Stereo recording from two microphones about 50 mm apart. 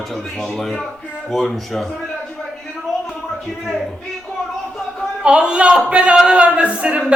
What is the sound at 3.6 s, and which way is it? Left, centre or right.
Speech, centre.